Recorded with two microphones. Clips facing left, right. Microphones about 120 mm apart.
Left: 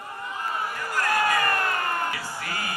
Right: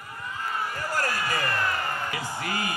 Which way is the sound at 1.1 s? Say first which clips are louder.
Left 5 dB; 55° left (ahead or behind).